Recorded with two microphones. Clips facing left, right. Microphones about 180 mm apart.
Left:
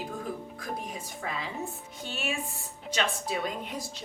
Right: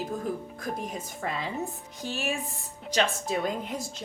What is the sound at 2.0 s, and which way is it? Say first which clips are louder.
Speech: right 3 dB; 40° right (ahead or behind).